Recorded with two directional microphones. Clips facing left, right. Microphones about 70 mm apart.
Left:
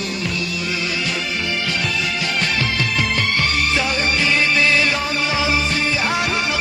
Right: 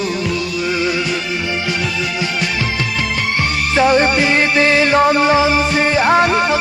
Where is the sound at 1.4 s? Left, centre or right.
Centre.